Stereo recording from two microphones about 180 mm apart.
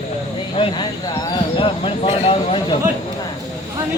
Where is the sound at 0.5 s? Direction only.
30° left (ahead or behind).